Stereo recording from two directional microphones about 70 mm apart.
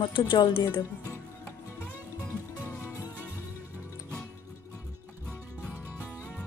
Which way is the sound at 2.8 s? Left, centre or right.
Left.